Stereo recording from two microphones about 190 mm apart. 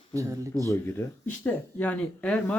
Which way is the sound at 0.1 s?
15° right (ahead or behind).